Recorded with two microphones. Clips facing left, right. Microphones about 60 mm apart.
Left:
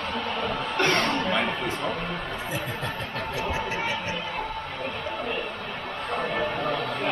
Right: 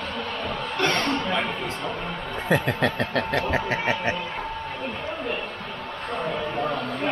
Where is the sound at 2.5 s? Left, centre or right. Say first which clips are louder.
Right 13 dB; right.